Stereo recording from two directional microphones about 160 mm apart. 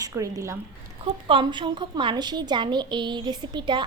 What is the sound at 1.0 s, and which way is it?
A woman's voice, 30° right (ahead or behind).